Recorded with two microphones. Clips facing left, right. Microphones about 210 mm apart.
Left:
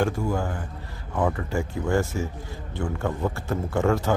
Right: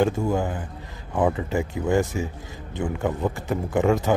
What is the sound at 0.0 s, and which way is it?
A man's voice, 20° right (ahead or behind).